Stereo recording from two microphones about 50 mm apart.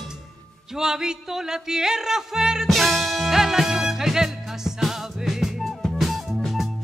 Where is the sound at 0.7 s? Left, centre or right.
Centre.